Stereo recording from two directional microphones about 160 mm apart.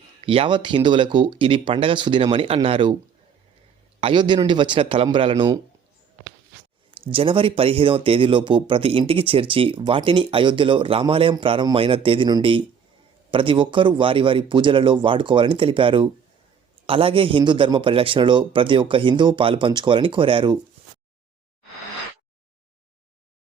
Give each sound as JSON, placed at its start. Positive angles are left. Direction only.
{"t": 0.2, "sound": "speech", "side_deg": -35}
{"t": 4.0, "sound": "a man's voice", "side_deg": -30}
{"t": 6.9, "sound": "speech", "side_deg": -35}